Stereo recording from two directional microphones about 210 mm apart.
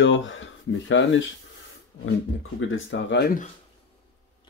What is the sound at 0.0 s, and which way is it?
Speech, 60° left (ahead or behind).